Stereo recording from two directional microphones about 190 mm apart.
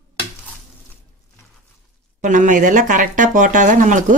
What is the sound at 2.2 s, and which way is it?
Speech, 40° right (ahead or behind).